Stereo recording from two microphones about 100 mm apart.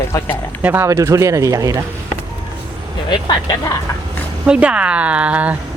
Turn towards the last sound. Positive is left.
turn(degrees=-15)  # may be behind; listen again after turning